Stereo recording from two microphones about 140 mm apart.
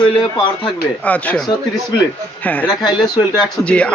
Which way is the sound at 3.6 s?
10° left (ahead or behind).